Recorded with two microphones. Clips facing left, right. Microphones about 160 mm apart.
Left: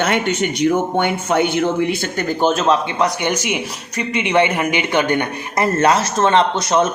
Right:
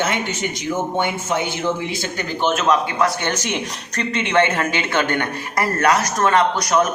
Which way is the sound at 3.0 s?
15° left (ahead or behind).